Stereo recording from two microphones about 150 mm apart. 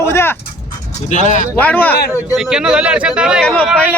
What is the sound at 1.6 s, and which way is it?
Speech, 10° left (ahead or behind).